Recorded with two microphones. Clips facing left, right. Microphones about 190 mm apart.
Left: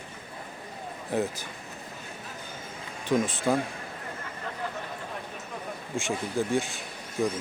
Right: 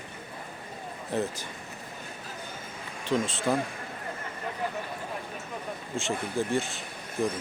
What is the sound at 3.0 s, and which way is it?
Speech, 15° left (ahead or behind).